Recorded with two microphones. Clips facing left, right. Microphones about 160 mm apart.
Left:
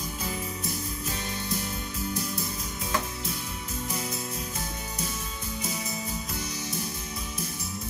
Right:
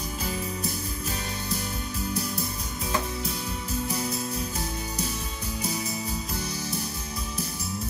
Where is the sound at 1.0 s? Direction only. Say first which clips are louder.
Right 1 dB; 35° right (ahead or behind).